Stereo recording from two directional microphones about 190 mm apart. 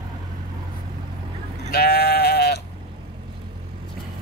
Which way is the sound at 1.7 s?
55° left (ahead or behind).